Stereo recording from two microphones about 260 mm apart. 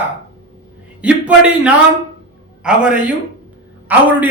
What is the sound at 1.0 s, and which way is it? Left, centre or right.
A man's voice, centre.